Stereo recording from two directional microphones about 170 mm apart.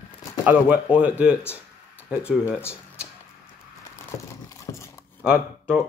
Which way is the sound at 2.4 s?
15° left (ahead or behind).